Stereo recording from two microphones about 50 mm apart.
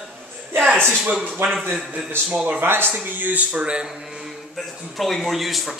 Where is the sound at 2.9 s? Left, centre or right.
Right.